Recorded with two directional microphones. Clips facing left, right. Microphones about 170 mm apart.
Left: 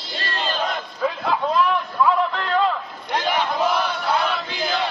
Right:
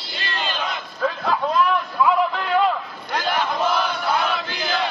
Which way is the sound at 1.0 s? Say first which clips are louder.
Even; centre (ahead or behind).